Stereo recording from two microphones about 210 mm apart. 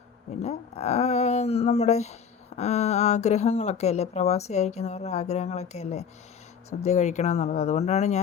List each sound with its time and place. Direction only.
0.4 s speech: 30° left (ahead or behind)